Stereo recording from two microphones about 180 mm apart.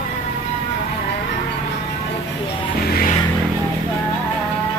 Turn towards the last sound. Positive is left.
turn(degrees=55)  # may be behind; listen again after turning